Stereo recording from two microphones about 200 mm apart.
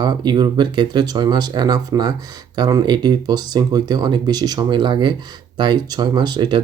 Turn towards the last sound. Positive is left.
turn(degrees=-20)  # may be behind; listen again after turning